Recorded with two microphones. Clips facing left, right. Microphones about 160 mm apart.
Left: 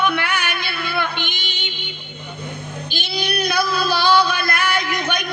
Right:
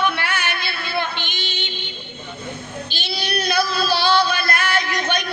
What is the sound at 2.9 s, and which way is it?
Meow, 15° left (ahead or behind).